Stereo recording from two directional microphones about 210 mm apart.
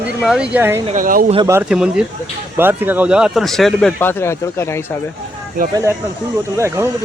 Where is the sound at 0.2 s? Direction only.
5° right (ahead or behind).